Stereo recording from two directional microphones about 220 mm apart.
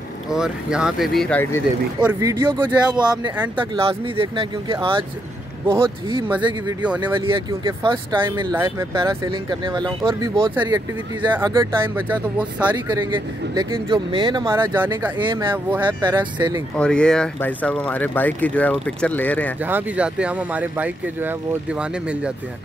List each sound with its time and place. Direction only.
0.3 s speech: 5° right (ahead or behind)
2.0 s speech: 10° right (ahead or behind)
7.2 s speech: 20° right (ahead or behind)
10.5 s speech: 10° right (ahead or behind)
12.7 s speech: 20° right (ahead or behind)
15.1 s speech: 20° right (ahead or behind)
16.7 s speech: 5° left (ahead or behind)
19.6 s speech: 5° right (ahead or behind)